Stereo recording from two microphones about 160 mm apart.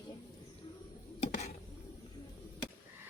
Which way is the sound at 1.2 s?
45° left (ahead or behind).